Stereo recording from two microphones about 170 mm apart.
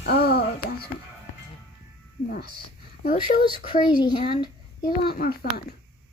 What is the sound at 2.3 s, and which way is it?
Speech, 65° left (ahead or behind).